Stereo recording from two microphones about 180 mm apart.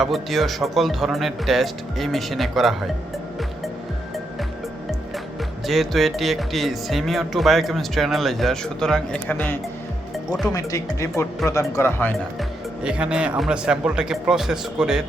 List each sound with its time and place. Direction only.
0.0 s speech: centre (ahead or behind)
5.6 s speech: centre (ahead or behind)
12.4 s speech: 5° right (ahead or behind)